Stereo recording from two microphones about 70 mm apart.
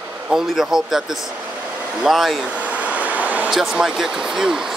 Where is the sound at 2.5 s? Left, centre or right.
Centre.